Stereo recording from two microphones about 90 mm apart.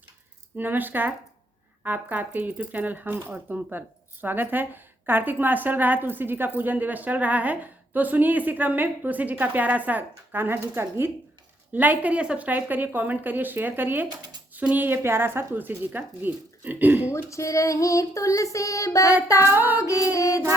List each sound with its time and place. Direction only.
0.5 s speech: 20° right (ahead or behind)
17.1 s female singing: 35° left (ahead or behind)
19.5 s speech: 20° right (ahead or behind)
19.8 s female singing: 40° left (ahead or behind)